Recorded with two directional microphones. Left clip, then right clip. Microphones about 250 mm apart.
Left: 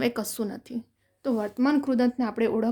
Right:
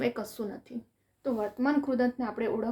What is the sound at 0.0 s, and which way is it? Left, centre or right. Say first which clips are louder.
Speech: left 4 dB; left.